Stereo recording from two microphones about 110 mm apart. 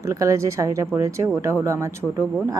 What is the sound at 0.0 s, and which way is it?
A woman's voice, 30° right (ahead or behind).